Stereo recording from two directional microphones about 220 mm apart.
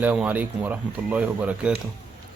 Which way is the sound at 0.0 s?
5° right (ahead or behind).